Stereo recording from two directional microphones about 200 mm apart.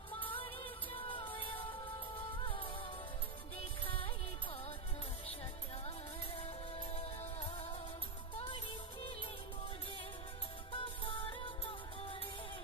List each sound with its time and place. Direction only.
0.2 s music: 25° left (ahead or behind)
6.3 s music: 30° left (ahead or behind)
10.7 s music: 25° left (ahead or behind)